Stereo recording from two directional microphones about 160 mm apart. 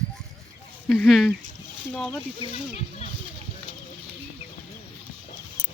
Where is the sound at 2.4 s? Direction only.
40° left (ahead or behind).